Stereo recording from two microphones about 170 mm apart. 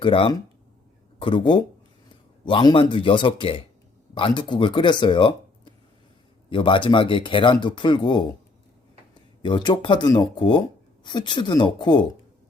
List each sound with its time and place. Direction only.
0.0 s speech: 30° left (ahead or behind)
9.4 s speech: 25° left (ahead or behind)